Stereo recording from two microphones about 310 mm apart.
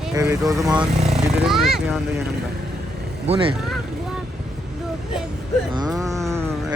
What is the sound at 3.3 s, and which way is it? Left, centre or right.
Speech, centre.